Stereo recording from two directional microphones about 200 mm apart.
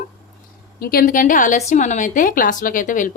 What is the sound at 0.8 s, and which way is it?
A woman's voice, 50° left (ahead or behind).